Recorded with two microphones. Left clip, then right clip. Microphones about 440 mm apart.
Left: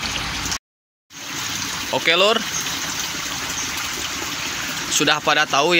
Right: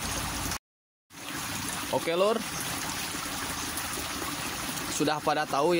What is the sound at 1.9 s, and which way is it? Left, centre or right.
Speech, right.